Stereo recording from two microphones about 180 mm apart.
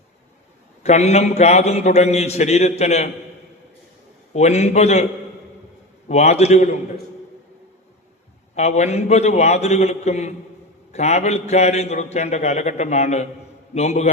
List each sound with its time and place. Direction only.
0.8 s a man's voice: 40° left (ahead or behind)
4.4 s a man's voice: 40° left (ahead or behind)
6.1 s a man's voice: 35° left (ahead or behind)
8.5 s a man's voice: 40° left (ahead or behind)